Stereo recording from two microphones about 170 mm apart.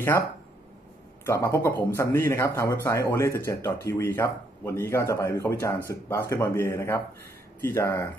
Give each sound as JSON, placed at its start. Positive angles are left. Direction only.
{"t": 1.2, "sound": "speech", "side_deg": 15}